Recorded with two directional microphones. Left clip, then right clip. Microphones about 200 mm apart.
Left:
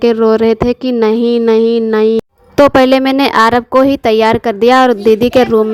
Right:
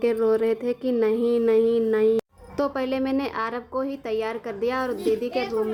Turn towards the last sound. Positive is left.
turn(degrees=50)  # may be behind; listen again after turning